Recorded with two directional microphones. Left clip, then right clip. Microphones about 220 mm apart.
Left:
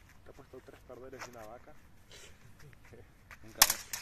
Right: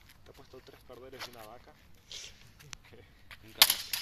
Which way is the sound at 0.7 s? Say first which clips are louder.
Left 1 dB; 40° left (ahead or behind).